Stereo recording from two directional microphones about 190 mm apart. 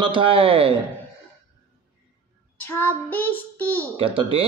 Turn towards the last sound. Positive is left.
turn(degrees=-30)  # may be behind; listen again after turning